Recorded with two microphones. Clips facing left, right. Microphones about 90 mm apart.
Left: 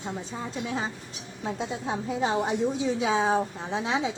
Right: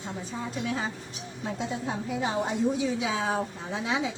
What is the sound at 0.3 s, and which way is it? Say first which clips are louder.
Speech: right 1 dB; 25° left (ahead or behind).